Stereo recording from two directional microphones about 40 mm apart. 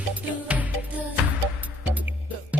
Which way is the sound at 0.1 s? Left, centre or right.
Right.